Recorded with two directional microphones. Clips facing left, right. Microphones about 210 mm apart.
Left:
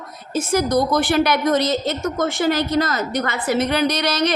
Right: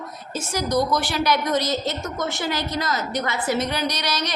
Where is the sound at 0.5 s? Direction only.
55° left (ahead or behind).